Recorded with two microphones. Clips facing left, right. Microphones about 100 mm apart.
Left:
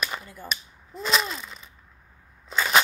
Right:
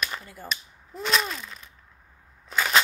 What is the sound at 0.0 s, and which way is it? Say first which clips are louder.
Cap gun: left 1 dB; 15° left (ahead or behind).